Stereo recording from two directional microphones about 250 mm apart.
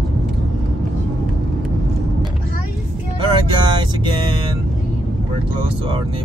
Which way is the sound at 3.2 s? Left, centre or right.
Centre.